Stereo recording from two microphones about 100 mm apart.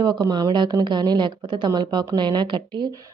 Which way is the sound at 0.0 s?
40° right (ahead or behind).